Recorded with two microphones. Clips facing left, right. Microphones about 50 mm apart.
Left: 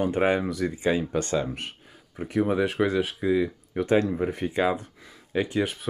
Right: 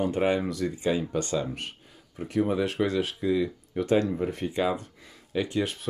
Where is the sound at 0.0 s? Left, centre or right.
Left.